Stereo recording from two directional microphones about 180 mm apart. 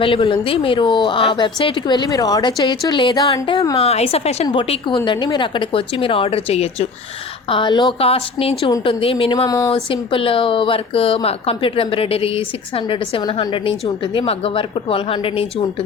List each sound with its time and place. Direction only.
0.0 s speech: 30° left (ahead or behind)
3.8 s speech: 35° left (ahead or behind)
9.5 s speech: 20° left (ahead or behind)
9.7 s speech: 30° left (ahead or behind)